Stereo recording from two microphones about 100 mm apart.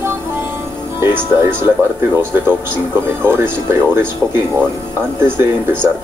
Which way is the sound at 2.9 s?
25° right (ahead or behind).